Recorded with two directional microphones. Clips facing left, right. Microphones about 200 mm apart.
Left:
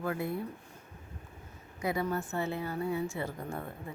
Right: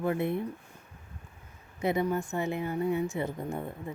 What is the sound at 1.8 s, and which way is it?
A woman's voice, 20° right (ahead or behind).